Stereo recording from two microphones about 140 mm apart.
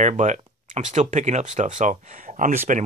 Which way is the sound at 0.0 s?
60° right (ahead or behind).